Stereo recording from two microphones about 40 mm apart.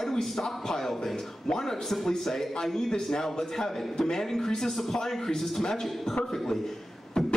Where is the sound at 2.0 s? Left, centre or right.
Centre.